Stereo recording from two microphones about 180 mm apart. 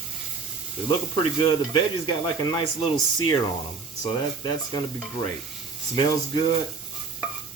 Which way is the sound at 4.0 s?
25° left (ahead or behind).